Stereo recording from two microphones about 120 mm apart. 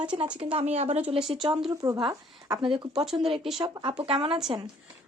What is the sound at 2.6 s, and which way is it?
Speech, 45° right (ahead or behind).